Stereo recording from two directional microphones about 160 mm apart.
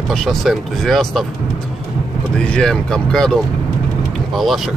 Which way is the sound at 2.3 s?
5° left (ahead or behind).